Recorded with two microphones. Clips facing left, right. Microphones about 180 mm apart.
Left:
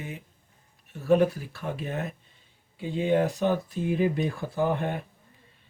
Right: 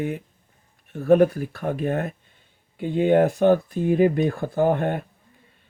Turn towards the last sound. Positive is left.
turn(degrees=-55)  # may be behind; listen again after turning